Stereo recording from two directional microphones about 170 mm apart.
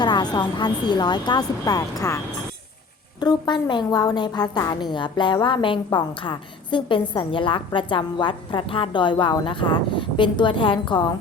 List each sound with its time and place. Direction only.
0.0 s a woman's voice: 25° left (ahead or behind)